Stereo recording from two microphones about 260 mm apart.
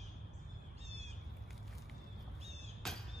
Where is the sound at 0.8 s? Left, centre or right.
Right.